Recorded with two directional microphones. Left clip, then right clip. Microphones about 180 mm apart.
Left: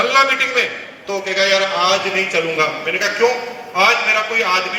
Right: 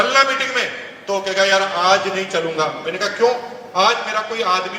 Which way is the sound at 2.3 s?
15° left (ahead or behind).